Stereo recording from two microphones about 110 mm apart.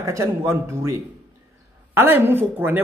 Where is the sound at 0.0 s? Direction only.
25° right (ahead or behind).